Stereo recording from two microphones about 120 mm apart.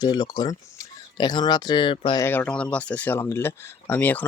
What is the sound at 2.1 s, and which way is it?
Speech, 20° left (ahead or behind).